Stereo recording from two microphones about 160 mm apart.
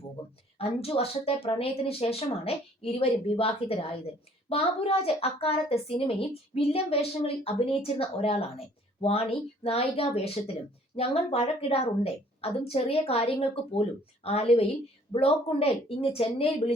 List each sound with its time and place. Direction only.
0.6 s a woman's voice: 40° left (ahead or behind)